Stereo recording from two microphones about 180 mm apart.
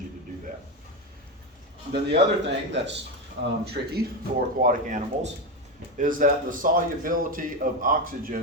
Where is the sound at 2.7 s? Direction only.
80° right.